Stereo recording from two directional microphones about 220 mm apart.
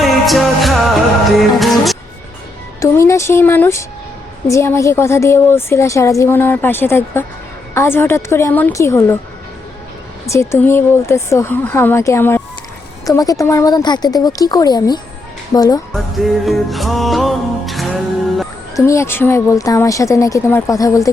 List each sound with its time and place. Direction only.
0.0 s music: centre (ahead or behind)
2.8 s a woman's voice: 10° left (ahead or behind)
10.2 s a woman's voice: 15° left (ahead or behind)
15.9 s music: centre (ahead or behind)
18.9 s a woman's voice: 10° left (ahead or behind)